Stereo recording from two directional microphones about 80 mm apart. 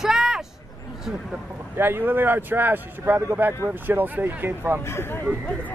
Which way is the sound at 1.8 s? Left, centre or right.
Right.